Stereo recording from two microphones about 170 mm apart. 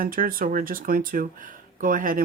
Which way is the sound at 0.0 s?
55° right (ahead or behind).